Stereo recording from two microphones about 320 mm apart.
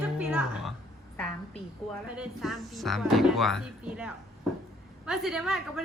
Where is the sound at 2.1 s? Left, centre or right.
Centre.